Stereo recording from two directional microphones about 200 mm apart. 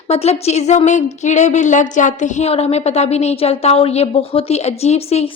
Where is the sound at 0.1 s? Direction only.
30° left (ahead or behind).